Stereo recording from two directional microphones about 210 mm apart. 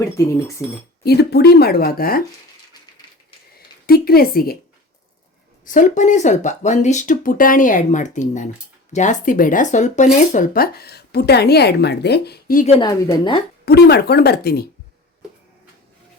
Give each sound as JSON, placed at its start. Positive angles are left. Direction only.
{"t": 0.0, "sound": "speech", "side_deg": 15}
{"t": 1.0, "sound": "speech", "side_deg": 50}
{"t": 3.8, "sound": "speech", "side_deg": 45}
{"t": 5.6, "sound": "speech", "side_deg": 40}
{"t": 12.6, "sound": "a woman's voice", "side_deg": 25}
{"t": 13.7, "sound": "speech", "side_deg": 50}